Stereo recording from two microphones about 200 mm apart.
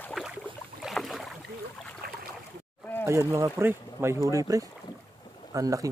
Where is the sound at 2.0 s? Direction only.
50° right (ahead or behind).